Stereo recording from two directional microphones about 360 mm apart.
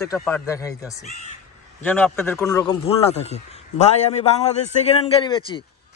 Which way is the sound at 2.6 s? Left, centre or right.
Centre.